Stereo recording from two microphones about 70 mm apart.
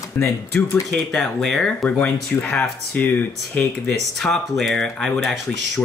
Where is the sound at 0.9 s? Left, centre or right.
Centre.